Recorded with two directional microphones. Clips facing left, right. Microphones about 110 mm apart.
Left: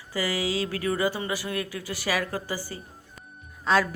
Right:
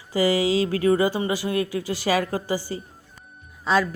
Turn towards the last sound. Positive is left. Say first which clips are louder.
# right 1 dB
turn(degrees=-5)  # may be behind; listen again after turning